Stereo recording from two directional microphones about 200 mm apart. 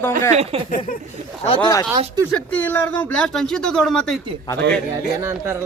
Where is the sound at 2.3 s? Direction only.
10° left (ahead or behind).